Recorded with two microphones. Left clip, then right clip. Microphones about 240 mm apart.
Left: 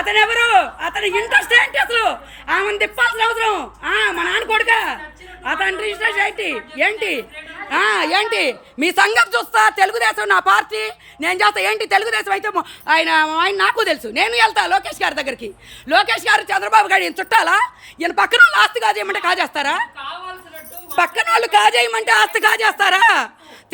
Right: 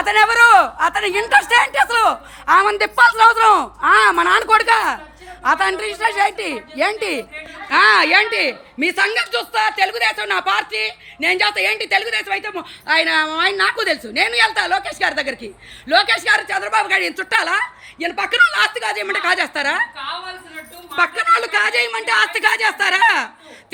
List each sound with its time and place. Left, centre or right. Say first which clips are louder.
0.0 s speech: right 3 dB; centre
4.7 s a woman's voice: right 1 dB; right
5.5 s speech: right 1 dB; centre
8.0 s a man's voice: right 2 dB; centre
20.9 s a man's voice: even; centre